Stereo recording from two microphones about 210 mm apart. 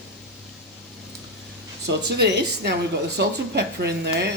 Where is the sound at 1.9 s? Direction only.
55° right (ahead or behind).